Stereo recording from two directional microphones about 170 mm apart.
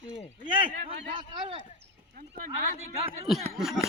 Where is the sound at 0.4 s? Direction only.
30° right (ahead or behind).